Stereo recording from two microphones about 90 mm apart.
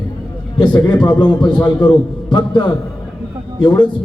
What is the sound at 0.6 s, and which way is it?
A man's voice, 55° left (ahead or behind).